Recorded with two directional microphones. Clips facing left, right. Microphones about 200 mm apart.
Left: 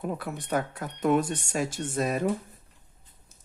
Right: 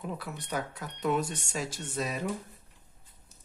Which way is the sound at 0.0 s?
50° left (ahead or behind).